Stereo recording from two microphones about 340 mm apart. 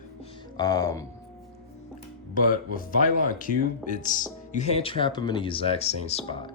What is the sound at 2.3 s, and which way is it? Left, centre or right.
Speech, left.